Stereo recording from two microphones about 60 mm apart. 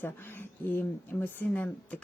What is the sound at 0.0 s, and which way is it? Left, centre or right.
Speech, left.